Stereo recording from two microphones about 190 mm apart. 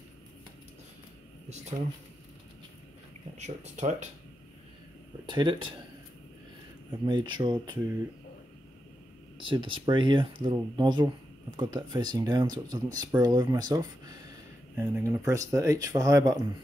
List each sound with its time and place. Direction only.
3.3 s speech: 35° right (ahead or behind)
5.2 s speech: 25° right (ahead or behind)
7.1 s speech: 25° right (ahead or behind)
9.4 s speech: 25° right (ahead or behind)